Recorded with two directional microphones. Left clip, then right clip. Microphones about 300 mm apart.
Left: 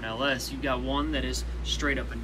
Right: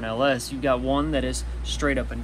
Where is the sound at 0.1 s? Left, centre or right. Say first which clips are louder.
Right 6 dB; centre.